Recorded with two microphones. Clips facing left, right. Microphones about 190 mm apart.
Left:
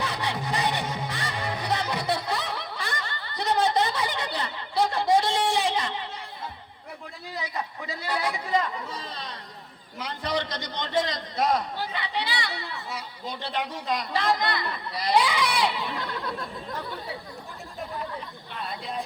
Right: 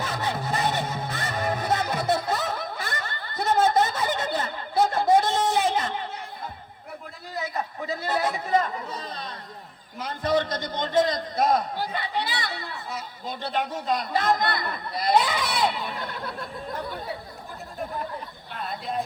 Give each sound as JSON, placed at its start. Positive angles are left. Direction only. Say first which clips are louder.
{"t": 0.0, "sound": "music", "louder": "right 1 dB", "side_deg": -45}
{"t": 0.5, "sound": "music", "louder": "right 1 dB", "side_deg": 15}
{"t": 1.3, "sound": "music", "louder": "right 5 dB", "side_deg": -45}
{"t": 7.3, "sound": "chatter", "louder": "right 3 dB", "side_deg": -50}
{"t": 10.0, "sound": "a man's voice", "louder": "right 5 dB", "side_deg": -50}